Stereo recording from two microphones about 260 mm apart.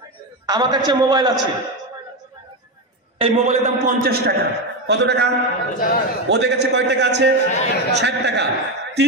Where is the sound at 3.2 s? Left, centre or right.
Right.